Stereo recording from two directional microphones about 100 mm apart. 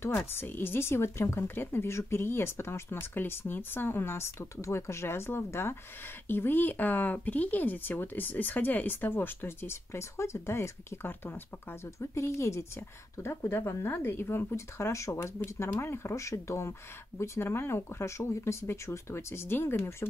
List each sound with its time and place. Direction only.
0.3 s speech: 20° left (ahead or behind)